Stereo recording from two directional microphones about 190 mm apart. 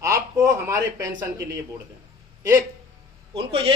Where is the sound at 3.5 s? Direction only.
30° right (ahead or behind).